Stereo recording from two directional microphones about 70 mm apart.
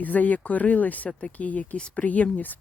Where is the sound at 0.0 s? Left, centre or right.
Left.